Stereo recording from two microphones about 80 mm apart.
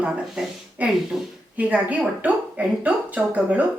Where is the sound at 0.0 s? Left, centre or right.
Centre.